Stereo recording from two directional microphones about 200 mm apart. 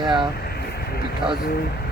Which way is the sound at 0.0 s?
20° right (ahead or behind).